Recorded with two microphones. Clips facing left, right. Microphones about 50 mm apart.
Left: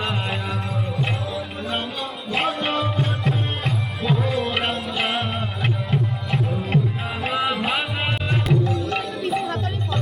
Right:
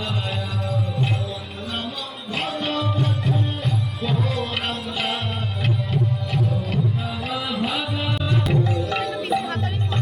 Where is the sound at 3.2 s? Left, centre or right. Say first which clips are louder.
Even; left.